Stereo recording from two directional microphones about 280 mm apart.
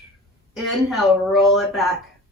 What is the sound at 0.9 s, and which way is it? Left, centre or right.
A woman's voice, centre.